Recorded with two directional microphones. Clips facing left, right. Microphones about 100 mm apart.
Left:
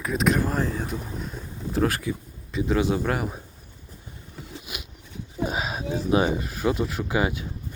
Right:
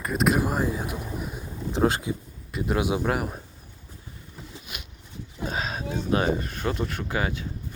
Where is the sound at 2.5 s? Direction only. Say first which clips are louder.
Left 2 dB; 10° right (ahead or behind).